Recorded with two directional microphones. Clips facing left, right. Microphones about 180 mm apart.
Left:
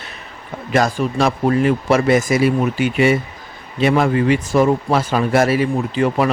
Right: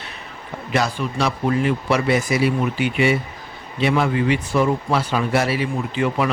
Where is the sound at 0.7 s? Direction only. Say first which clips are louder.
Left 5 dB; 45° left (ahead or behind).